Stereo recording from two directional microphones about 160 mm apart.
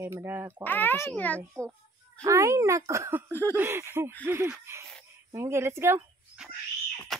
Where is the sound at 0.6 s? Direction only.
10° left (ahead or behind).